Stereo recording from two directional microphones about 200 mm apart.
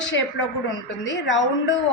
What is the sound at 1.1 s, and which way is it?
Speech, 65° left (ahead or behind).